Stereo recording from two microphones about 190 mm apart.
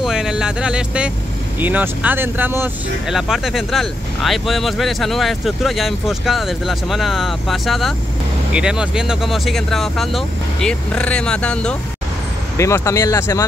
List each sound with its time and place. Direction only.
0.0 s speech: 5° right (ahead or behind)
12.5 s speech: 15° left (ahead or behind)